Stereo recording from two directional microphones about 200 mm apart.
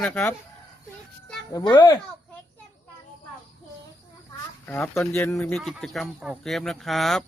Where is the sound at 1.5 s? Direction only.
20° left (ahead or behind).